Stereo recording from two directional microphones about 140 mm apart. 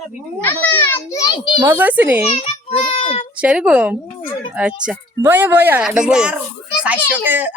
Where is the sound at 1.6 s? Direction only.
15° right (ahead or behind).